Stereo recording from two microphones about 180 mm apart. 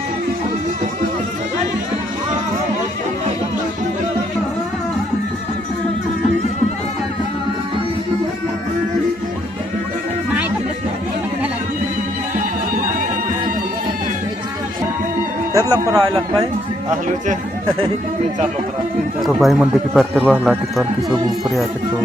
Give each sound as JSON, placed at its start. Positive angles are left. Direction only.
{"t": 15.5, "sound": "speech", "side_deg": -20}
{"t": 19.2, "sound": "speech", "side_deg": 0}